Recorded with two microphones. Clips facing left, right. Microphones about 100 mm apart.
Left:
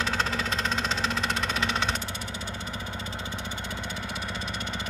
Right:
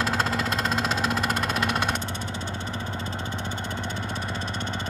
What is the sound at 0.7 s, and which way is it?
Vehicle, 5° right (ahead or behind).